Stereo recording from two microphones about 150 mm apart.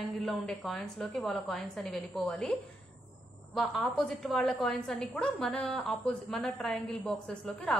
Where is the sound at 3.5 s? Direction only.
Centre (ahead or behind).